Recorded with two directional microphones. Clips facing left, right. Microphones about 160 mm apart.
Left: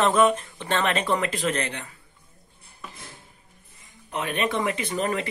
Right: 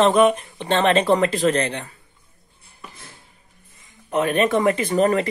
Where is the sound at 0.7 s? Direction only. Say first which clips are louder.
Right 7 dB; 30° right (ahead or behind).